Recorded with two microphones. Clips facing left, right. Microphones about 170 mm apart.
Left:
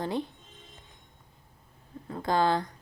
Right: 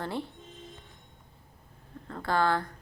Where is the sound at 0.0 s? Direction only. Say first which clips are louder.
Left 3 dB; 20° left (ahead or behind).